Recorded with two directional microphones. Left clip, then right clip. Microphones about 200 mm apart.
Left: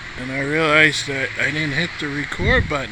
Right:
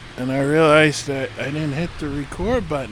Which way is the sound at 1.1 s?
20° right (ahead or behind).